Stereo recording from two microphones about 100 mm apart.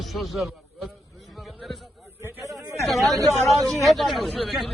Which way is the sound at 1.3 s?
Centre (ahead or behind).